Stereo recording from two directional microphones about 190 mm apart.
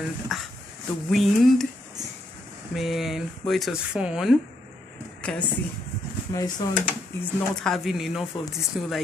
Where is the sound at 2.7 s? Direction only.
Centre (ahead or behind).